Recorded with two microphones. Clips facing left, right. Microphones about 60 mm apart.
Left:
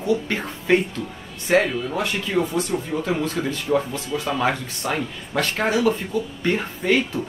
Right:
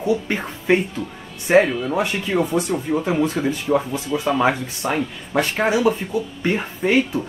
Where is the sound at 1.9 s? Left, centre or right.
Centre.